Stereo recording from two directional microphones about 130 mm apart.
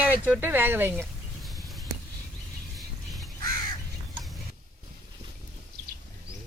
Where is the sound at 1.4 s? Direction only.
Centre (ahead or behind).